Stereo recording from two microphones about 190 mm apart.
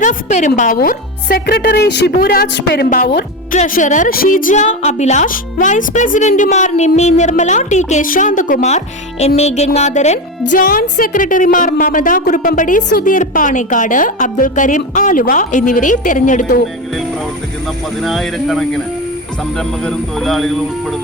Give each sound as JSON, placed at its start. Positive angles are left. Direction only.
{"t": 0.0, "sound": "a woman's voice", "side_deg": 40}
{"t": 3.6, "sound": "a woman's voice", "side_deg": 40}
{"t": 18.0, "sound": "speech", "side_deg": 0}